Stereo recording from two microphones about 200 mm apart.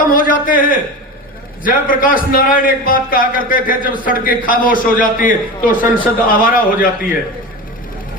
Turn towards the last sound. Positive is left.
turn(degrees=45)  # may be behind; listen again after turning